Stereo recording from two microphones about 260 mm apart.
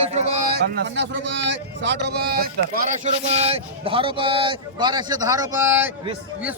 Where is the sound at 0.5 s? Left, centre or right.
Right.